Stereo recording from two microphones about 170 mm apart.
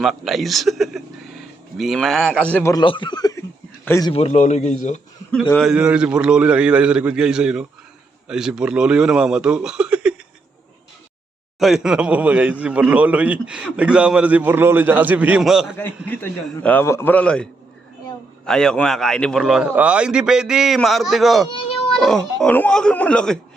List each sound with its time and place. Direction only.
0.0 s a man's voice: centre (ahead or behind)
2.7 s chuckle: 30° left (ahead or behind)
3.8 s a man's voice: 15° left (ahead or behind)
4.1 s speech: 40° left (ahead or behind)
5.3 s a man's voice: 5° left (ahead or behind)
5.7 s a man's voice: 5° right (ahead or behind)
11.6 s a man's voice: 5° right (ahead or behind)
16.0 s a man's voice: 10° left (ahead or behind)